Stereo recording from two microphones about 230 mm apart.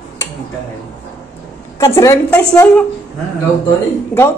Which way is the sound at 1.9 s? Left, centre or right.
Centre.